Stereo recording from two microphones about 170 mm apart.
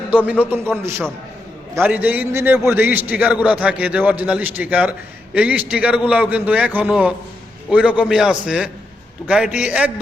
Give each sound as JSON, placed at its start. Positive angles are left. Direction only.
{"t": 0.8, "sound": "a man's voice", "side_deg": -15}